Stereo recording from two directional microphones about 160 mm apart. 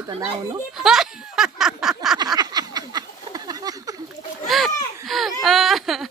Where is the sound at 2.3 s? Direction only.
25° right (ahead or behind).